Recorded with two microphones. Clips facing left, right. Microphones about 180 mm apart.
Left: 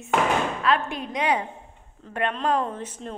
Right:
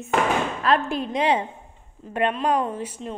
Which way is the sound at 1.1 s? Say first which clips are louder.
Right 2 dB; 25° right (ahead or behind).